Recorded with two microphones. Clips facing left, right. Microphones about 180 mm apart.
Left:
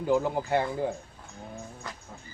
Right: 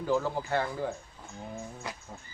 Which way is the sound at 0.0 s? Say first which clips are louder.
Left 3 dB; 15° left (ahead or behind).